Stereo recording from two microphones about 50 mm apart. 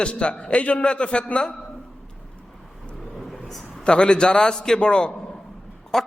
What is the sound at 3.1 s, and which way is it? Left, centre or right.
Vehicle, centre.